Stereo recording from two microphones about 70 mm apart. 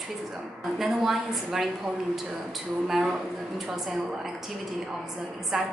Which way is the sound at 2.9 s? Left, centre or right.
Centre.